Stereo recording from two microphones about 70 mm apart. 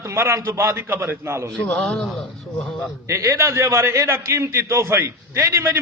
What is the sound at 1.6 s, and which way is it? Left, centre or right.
Speech, centre.